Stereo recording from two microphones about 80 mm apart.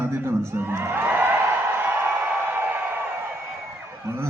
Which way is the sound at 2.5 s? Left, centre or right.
Right.